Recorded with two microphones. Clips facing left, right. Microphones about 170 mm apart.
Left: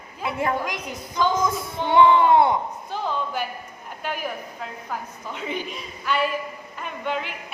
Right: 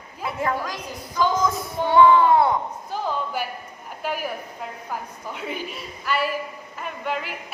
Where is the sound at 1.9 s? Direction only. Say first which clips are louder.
Even; 25° left (ahead or behind).